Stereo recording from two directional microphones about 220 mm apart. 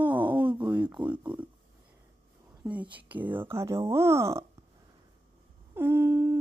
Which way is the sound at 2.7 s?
5° right (ahead or behind).